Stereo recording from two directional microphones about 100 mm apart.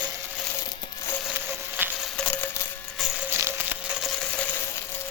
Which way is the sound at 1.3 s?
15° right (ahead or behind).